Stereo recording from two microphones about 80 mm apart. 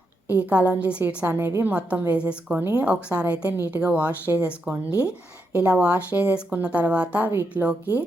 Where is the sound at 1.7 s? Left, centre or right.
Centre.